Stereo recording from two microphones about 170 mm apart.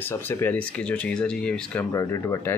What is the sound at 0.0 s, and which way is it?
Speech, 15° left (ahead or behind).